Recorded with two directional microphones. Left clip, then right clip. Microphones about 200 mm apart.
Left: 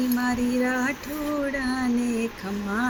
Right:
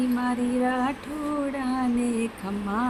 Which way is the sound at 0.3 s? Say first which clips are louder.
Left 1 dB; centre (ahead or behind).